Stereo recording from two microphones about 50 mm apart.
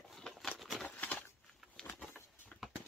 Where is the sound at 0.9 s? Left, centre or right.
Left.